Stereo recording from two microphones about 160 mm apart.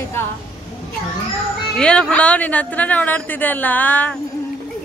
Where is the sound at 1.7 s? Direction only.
5° left (ahead or behind).